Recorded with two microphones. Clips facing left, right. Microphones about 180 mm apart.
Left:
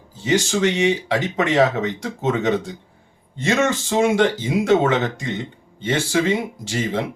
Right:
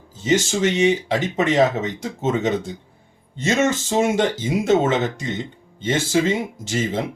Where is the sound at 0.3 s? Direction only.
20° right (ahead or behind).